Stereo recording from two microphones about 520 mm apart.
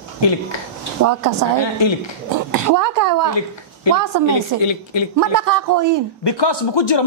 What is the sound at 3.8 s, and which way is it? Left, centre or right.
Speech, left.